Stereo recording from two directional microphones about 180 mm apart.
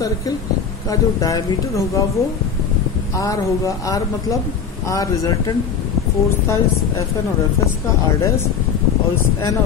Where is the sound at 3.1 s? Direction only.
20° left (ahead or behind).